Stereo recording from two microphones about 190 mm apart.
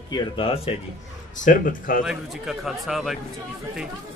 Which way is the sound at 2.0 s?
Centre (ahead or behind).